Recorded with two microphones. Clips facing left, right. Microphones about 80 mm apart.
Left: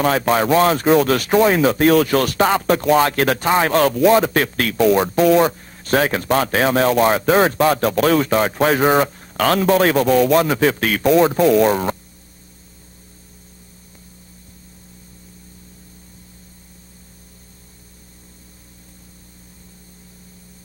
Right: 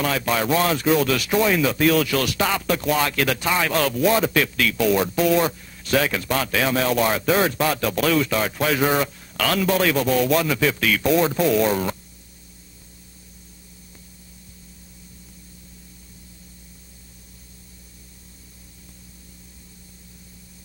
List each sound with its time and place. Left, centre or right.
0.0 s speech: left